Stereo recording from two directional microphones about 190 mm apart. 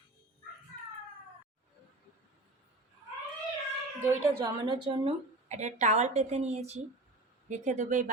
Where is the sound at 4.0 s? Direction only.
15° right (ahead or behind).